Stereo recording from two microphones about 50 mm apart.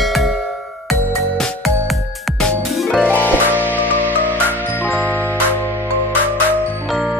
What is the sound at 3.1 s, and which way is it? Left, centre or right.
Music, left.